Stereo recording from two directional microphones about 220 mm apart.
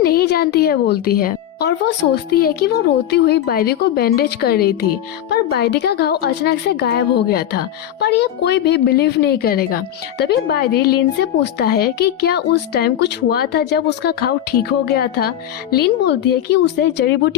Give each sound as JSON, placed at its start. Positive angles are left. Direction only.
{"t": 0.0, "sound": "a woman's voice", "side_deg": 45}